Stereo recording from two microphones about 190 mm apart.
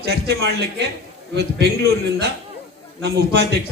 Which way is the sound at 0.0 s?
60° right (ahead or behind).